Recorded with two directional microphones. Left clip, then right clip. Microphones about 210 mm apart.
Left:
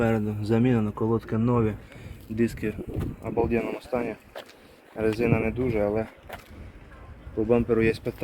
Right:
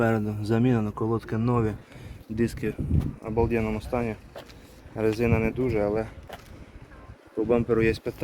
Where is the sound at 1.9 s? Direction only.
15° right (ahead or behind).